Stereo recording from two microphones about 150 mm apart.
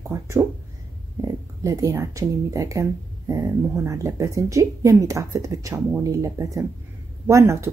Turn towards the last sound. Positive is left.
turn(degrees=-20)  # may be behind; listen again after turning